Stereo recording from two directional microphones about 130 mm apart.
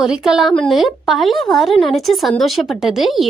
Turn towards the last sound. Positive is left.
turn(degrees=0)  # may be behind; listen again after turning